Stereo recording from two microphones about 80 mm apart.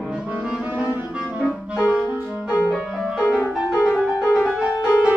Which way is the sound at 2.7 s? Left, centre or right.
Centre.